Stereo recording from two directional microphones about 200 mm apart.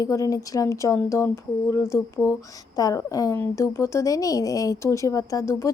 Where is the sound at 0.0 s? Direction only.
15° left (ahead or behind).